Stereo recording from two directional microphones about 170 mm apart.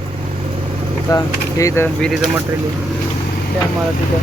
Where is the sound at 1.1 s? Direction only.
20° left (ahead or behind).